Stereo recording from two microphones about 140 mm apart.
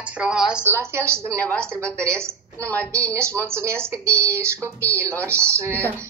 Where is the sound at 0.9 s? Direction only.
20° right (ahead or behind).